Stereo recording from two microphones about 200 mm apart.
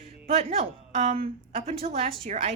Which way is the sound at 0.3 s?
30° right (ahead or behind).